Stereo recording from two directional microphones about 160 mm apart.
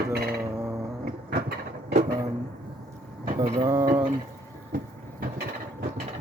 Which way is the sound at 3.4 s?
20° right (ahead or behind).